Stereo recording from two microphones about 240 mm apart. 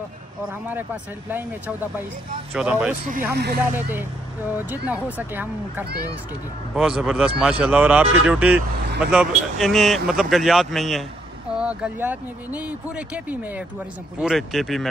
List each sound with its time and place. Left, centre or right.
2.5 s speech: centre
3.3 s speech: right
4.6 s speech: centre